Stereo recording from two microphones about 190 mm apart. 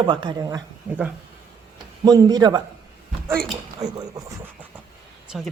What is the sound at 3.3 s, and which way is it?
Speech, centre (ahead or behind).